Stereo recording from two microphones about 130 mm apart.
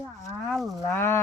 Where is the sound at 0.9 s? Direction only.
20° left (ahead or behind).